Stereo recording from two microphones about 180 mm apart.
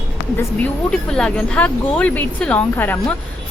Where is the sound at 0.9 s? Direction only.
5° left (ahead or behind).